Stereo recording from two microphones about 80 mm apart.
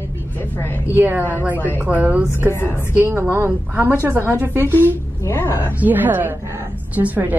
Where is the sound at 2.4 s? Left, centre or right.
Left.